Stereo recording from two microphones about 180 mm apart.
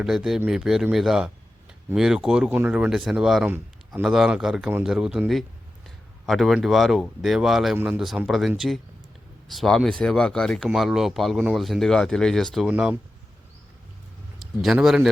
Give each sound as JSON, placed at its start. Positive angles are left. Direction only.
{"t": 0.0, "sound": "speech", "side_deg": 0}
{"t": 14.3, "sound": "a man's voice", "side_deg": 0}